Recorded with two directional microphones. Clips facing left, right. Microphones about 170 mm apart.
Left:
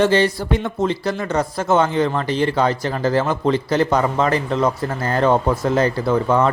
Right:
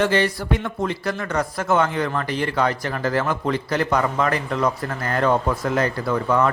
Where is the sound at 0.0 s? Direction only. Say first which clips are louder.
Left 4 dB; 30° left (ahead or behind).